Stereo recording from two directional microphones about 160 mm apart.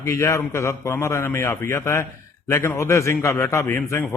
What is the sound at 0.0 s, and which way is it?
A man's voice, 20° left (ahead or behind).